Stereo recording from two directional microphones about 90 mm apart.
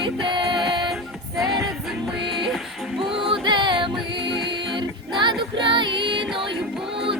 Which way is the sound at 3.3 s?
60° right (ahead or behind).